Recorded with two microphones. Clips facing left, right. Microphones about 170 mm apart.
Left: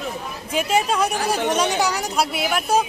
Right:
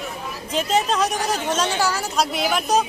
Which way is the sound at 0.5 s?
10° left (ahead or behind).